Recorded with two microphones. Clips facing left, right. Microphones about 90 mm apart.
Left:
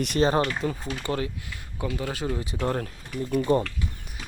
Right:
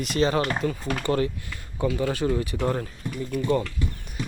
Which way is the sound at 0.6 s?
15° left (ahead or behind).